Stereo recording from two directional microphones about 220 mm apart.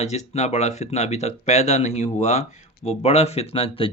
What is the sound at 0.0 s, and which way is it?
Speech, 30° left (ahead or behind).